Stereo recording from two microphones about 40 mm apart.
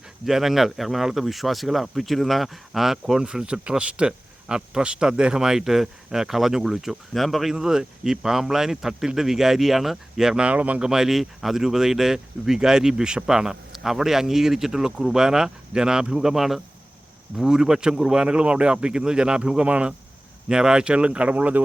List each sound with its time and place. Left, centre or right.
0.3 s speech: centre
3.2 s speech: right
7.1 s speech: centre
7.5 s speech: centre
10.3 s speech: right
10.8 s speech: centre
19.6 s speech: right
20.5 s speech: right